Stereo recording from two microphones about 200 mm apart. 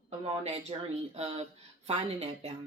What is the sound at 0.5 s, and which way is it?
Speech, 30° right (ahead or behind).